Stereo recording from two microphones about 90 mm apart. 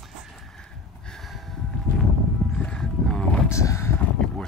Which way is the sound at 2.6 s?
10° left (ahead or behind).